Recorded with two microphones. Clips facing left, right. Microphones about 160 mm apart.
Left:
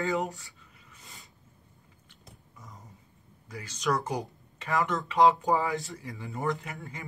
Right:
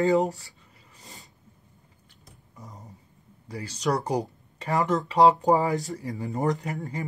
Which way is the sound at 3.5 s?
35° right (ahead or behind).